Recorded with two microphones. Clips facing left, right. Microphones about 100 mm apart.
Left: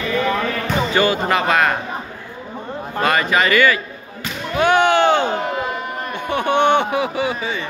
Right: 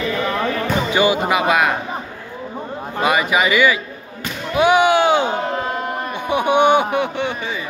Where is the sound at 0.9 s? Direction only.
15° right (ahead or behind).